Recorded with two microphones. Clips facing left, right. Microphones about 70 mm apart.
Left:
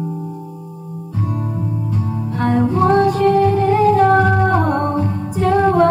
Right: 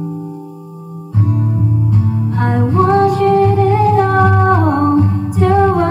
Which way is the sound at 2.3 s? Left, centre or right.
Right.